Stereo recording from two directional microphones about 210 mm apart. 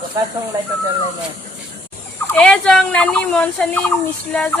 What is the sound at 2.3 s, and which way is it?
Speech, 5° left (ahead or behind).